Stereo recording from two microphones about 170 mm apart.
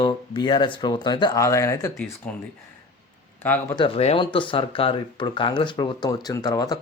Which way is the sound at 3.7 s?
35° left (ahead or behind).